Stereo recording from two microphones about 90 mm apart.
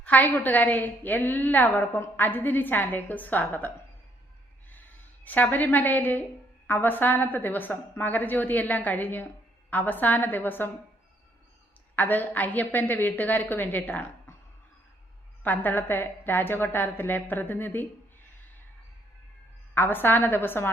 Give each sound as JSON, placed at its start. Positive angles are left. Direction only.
{"t": 0.0, "sound": "a woman's voice", "side_deg": 20}
{"t": 4.7, "sound": "a woman's voice", "side_deg": 20}
{"t": 11.9, "sound": "a woman's voice", "side_deg": 20}
{"t": 15.4, "sound": "a woman's voice", "side_deg": 20}
{"t": 19.7, "sound": "a woman's voice", "side_deg": 20}